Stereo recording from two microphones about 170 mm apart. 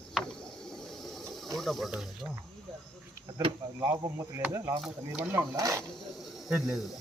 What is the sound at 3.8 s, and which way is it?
Speech, 15° right (ahead or behind).